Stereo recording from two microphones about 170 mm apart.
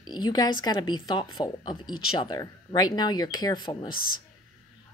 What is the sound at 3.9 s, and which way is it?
Speech, 55° left (ahead or behind).